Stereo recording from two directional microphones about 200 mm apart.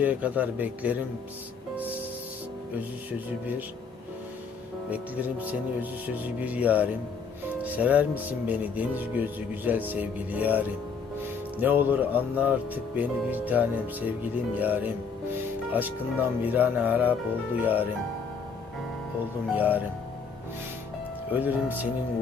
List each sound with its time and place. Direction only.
0.0 s speech: 5° right (ahead or behind)
4.9 s speech: 5° right (ahead or behind)
19.5 s speech: 10° right (ahead or behind)
21.2 s speech: 10° right (ahead or behind)